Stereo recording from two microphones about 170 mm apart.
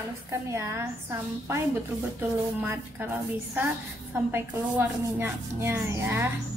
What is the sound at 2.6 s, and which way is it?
Speech, 10° right (ahead or behind).